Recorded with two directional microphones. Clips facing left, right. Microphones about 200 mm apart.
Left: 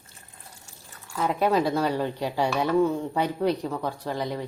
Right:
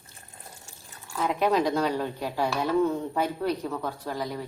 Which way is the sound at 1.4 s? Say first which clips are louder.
Left 1 dB; 5° left (ahead or behind).